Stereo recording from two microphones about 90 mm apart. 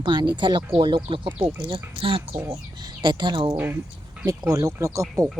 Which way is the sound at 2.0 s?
85° right.